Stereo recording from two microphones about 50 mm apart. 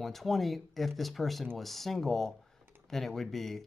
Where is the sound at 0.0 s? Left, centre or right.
Centre.